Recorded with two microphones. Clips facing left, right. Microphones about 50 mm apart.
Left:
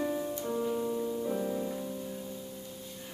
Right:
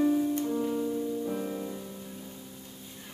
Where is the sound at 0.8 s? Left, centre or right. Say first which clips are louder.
Right 1 dB; left.